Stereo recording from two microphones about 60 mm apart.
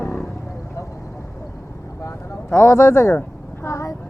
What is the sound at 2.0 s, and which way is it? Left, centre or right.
Vehicle, left.